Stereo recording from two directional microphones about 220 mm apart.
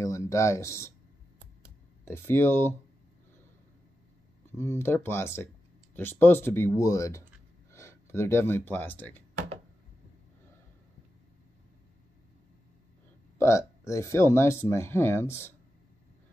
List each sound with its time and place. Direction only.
0.0 s speech: 15° left (ahead or behind)
2.0 s speech: 10° left (ahead or behind)
4.6 s speech: 10° left (ahead or behind)
13.4 s speech: 15° left (ahead or behind)